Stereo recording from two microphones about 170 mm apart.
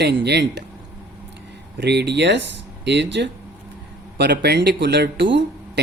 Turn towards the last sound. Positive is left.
turn(degrees=-90)